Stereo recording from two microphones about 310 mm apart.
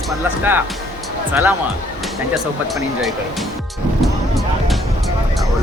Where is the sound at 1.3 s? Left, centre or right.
Centre.